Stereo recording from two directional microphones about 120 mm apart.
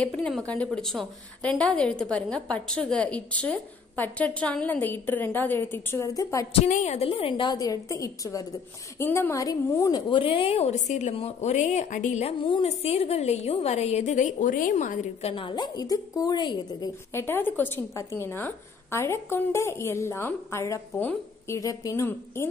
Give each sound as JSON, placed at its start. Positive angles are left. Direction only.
{"t": 0.0, "sound": "a woman's voice", "side_deg": 10}
{"t": 6.6, "sound": "a woman's voice", "side_deg": 80}
{"t": 11.1, "sound": "a woman's voice", "side_deg": 60}
{"t": 15.3, "sound": "a woman's voice", "side_deg": 40}
{"t": 17.1, "sound": "a woman's voice", "side_deg": 20}